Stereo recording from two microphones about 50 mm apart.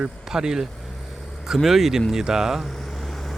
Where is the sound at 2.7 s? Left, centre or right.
Centre.